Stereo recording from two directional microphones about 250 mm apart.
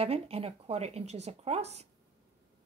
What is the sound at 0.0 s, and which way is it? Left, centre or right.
A woman's voice, right.